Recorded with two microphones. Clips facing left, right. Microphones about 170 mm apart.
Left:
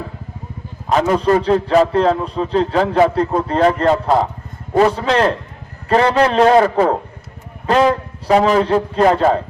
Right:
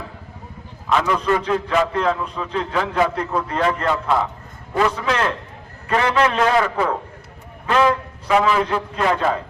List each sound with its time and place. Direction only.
0.9 s a man's voice: 40° left (ahead or behind)